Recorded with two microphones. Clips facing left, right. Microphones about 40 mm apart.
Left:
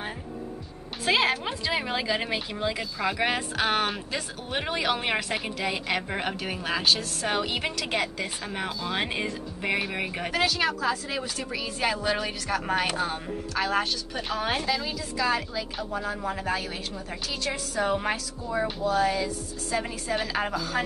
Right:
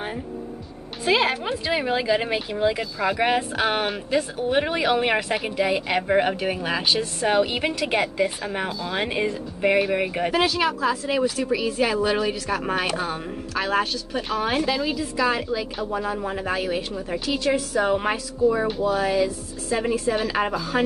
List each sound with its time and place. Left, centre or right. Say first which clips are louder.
1.0 s speech: right 3 dB; centre
14.9 s a woman's voice: right 4 dB; centre
18.1 s a woman's voice: right 9 dB; centre